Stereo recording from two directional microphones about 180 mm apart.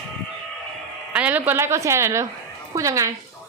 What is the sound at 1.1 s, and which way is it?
A woman's voice, 10° right (ahead or behind).